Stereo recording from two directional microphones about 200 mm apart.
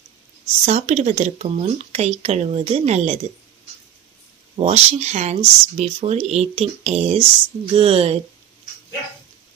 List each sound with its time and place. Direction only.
0.7 s speech: 35° right (ahead or behind)
4.6 s speech: 35° right (ahead or behind)